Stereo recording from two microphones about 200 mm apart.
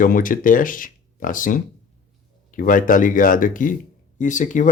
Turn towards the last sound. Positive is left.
turn(degrees=40)  # may be behind; listen again after turning